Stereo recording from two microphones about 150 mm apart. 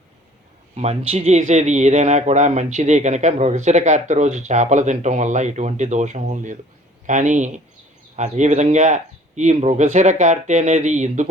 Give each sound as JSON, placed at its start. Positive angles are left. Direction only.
{"t": 0.8, "sound": "a man's voice", "side_deg": -45}